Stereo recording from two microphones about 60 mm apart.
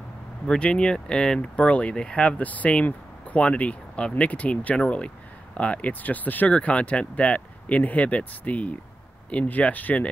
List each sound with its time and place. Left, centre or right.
0.5 s speech: centre